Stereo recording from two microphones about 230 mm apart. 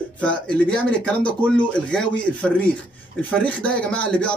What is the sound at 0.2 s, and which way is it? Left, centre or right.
Speech, centre.